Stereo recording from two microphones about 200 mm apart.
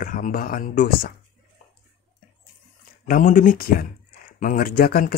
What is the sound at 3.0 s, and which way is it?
Speech, 45° left (ahead or behind).